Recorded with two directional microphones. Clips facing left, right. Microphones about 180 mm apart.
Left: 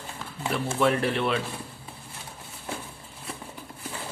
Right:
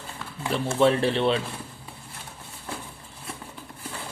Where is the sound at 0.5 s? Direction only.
30° right (ahead or behind).